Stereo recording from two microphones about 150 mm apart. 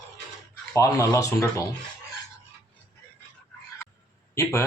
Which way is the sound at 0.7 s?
20° left (ahead or behind).